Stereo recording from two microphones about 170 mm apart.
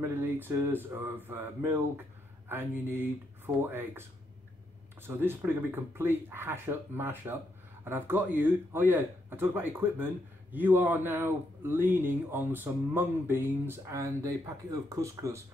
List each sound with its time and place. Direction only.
0.0 s speech: 10° right (ahead or behind)
5.0 s speech: 10° right (ahead or behind)